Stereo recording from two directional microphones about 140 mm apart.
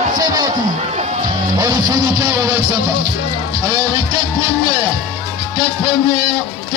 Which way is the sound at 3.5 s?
30° right (ahead or behind).